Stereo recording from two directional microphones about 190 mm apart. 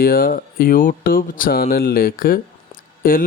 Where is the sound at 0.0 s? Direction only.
50° left (ahead or behind).